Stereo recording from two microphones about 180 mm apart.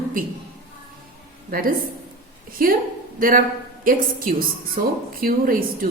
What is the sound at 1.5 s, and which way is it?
Speech, 50° right (ahead or behind).